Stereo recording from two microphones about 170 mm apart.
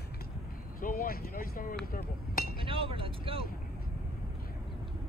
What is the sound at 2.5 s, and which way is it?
Speech, 30° right (ahead or behind).